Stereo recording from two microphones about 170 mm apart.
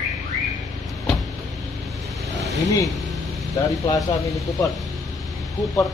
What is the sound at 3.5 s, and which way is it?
Speech, 20° left (ahead or behind).